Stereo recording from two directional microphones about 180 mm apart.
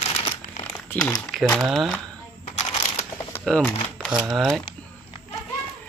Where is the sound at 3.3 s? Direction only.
10° left (ahead or behind).